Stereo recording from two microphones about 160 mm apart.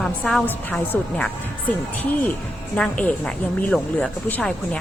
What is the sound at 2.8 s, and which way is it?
Speech, 10° left (ahead or behind).